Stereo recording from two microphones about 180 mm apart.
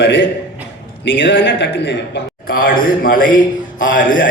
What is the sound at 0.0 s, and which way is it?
A man's voice, 85° left.